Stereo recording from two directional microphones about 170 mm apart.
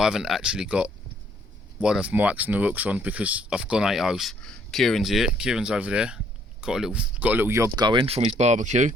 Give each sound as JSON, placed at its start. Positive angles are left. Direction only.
{"t": 0.0, "sound": "speech", "side_deg": -5}